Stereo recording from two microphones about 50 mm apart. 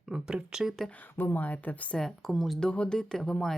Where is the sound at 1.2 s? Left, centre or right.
Left.